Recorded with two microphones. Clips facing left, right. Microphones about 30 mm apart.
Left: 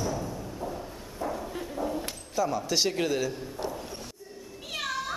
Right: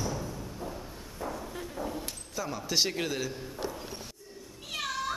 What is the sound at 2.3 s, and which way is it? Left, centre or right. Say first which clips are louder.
A man's voice: left 4 dB; centre.